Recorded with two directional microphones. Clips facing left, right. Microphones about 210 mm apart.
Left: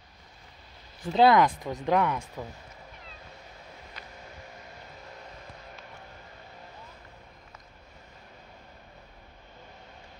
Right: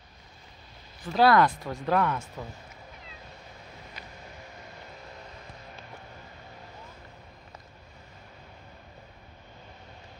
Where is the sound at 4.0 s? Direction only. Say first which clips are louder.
Even; 10° right (ahead or behind).